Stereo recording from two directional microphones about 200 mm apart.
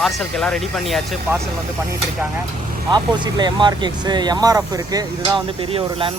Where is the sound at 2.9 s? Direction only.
20° right (ahead or behind).